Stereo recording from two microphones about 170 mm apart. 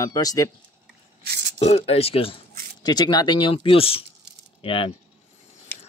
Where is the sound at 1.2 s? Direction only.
70° right (ahead or behind).